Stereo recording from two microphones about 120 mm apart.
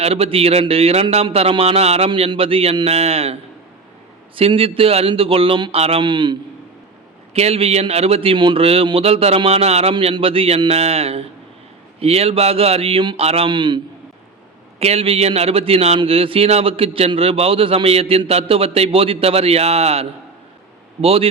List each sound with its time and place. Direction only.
0.0 s a man's voice: 55° right (ahead or behind)
4.4 s a man's voice: 50° right (ahead or behind)
7.3 s speech: 60° right (ahead or behind)
13.5 s speech: 40° right (ahead or behind)
14.8 s a man's voice: 60° right (ahead or behind)